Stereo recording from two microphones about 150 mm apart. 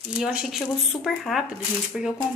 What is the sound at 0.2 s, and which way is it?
A woman's voice, 5° right (ahead or behind).